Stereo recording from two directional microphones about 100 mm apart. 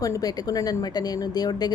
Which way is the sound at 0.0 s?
35° left (ahead or behind).